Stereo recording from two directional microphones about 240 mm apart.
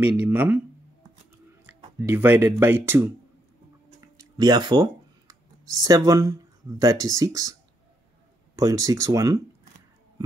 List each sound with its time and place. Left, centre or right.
0.0 s speech: centre
2.0 s speech: centre
4.0 s a sound: centre
5.3 s speech: centre
8.5 s speech: centre